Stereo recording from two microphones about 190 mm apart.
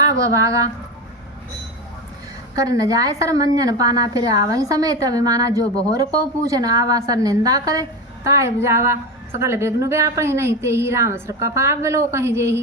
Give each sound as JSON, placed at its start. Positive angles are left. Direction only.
{"t": 0.0, "sound": "speech", "side_deg": -15}
{"t": 2.6, "sound": "a woman's voice", "side_deg": -20}